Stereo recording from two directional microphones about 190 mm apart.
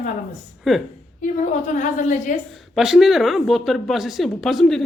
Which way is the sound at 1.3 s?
40° left (ahead or behind).